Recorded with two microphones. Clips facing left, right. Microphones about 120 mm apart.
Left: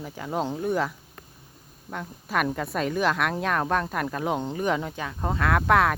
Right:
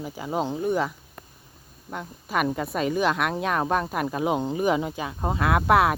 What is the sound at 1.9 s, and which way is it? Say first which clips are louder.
Speech: even; 5° right (ahead or behind).